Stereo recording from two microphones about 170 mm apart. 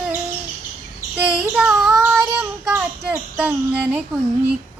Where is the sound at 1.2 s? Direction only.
10° right (ahead or behind).